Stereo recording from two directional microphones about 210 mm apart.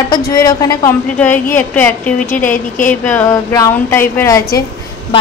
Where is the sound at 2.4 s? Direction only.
40° left (ahead or behind).